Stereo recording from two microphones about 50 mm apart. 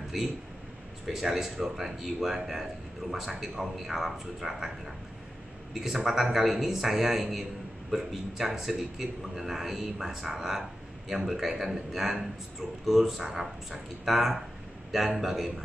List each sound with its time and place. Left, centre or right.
0.1 s a man's voice: centre